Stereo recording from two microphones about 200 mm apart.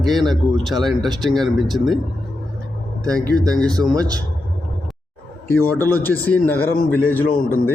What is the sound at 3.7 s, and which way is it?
Speech, 20° right (ahead or behind).